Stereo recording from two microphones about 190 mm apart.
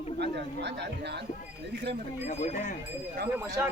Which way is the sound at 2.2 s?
35° left (ahead or behind).